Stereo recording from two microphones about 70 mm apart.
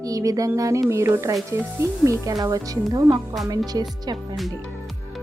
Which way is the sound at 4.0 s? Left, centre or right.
Right.